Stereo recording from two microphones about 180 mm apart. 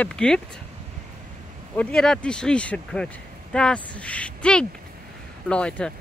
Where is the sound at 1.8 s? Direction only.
5° left (ahead or behind).